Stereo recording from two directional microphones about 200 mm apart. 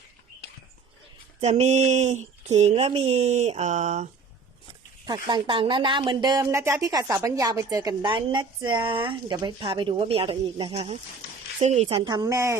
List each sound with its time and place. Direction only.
1.4 s speech: 35° right (ahead or behind)
5.0 s speech: 20° right (ahead or behind)